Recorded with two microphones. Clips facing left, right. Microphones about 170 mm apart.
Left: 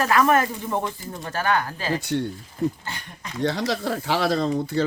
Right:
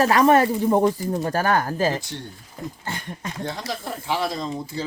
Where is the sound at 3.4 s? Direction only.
80° left.